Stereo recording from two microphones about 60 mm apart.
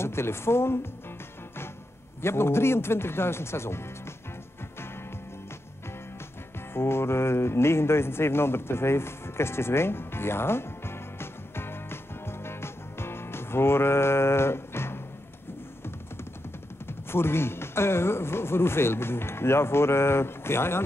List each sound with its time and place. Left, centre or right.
0.0 s speech: left
2.2 s speech: left
6.7 s music: left
17.1 s speech: left